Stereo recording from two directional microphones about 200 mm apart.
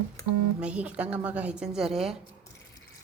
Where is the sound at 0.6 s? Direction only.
5° right (ahead or behind).